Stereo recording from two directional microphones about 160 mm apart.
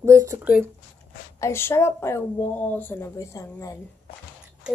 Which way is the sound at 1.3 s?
15° left (ahead or behind).